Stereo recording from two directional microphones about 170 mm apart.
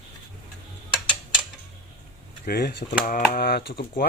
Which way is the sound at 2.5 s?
65° left (ahead or behind).